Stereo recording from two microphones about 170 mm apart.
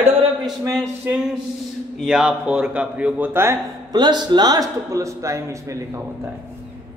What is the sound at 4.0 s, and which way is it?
A man's voice, 25° right (ahead or behind).